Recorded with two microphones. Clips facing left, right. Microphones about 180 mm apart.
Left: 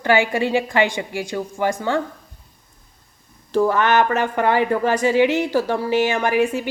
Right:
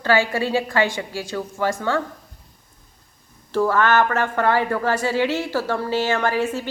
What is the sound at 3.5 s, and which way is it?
Speech, 15° left (ahead or behind).